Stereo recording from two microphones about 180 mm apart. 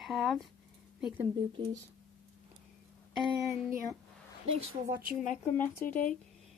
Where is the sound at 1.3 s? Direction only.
25° right (ahead or behind).